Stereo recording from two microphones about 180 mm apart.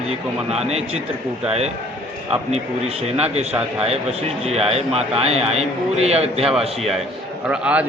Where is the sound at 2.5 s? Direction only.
35° right (ahead or behind).